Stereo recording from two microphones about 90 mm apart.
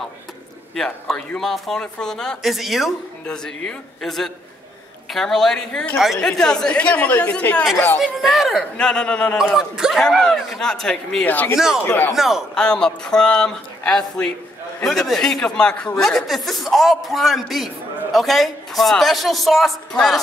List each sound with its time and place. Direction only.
0.7 s speech: 5° left (ahead or behind)
7.7 s speech: 25° left (ahead or behind)
8.0 s speech: centre (ahead or behind)
8.7 s speech: 10° left (ahead or behind)
9.6 s speech: 5° right (ahead or behind)
11.2 s speech: 20° left (ahead or behind)
12.2 s speech: 5° right (ahead or behind)
12.5 s speech: 10° left (ahead or behind)